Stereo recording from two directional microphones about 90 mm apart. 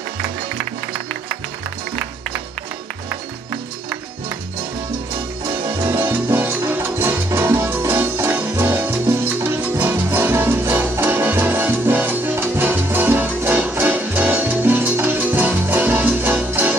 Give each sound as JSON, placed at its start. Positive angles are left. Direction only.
{"t": 5.9, "sound": "salsa music", "side_deg": -20}
{"t": 6.7, "sound": "music", "side_deg": -25}